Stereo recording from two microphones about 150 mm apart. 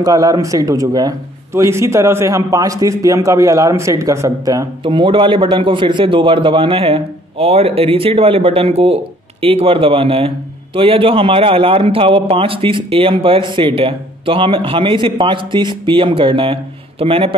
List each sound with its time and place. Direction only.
0.0 s a man's voice: 25° right (ahead or behind)
4.8 s a man's voice: 35° right (ahead or behind)